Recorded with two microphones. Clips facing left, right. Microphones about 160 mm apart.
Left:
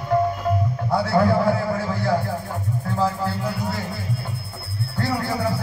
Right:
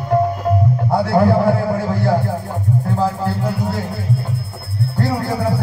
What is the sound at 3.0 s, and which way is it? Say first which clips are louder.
Music: right 4 dB; 50° right (ahead or behind).